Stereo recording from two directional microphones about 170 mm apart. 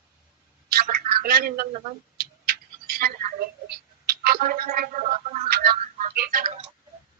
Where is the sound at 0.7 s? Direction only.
60° right (ahead or behind).